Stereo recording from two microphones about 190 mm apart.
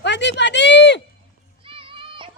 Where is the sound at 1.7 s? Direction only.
25° right (ahead or behind).